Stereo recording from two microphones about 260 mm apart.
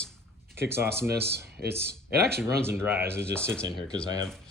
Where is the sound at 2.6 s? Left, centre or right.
Centre.